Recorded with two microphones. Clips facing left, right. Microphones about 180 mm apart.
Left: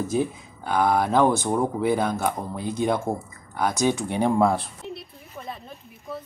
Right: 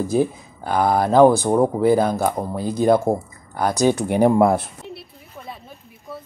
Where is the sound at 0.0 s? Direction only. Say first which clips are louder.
Right 5 dB; 35° right (ahead or behind).